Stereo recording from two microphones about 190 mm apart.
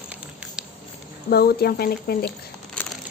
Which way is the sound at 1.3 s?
55° left (ahead or behind).